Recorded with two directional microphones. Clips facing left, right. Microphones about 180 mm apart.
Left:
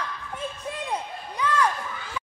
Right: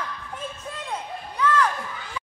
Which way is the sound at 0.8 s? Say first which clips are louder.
Right 1 dB; 15° left (ahead or behind).